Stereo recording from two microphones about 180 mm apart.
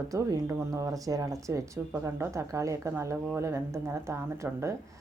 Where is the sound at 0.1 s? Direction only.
20° right (ahead or behind).